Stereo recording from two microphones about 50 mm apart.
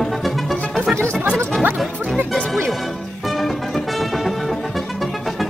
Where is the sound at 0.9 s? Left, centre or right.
Right.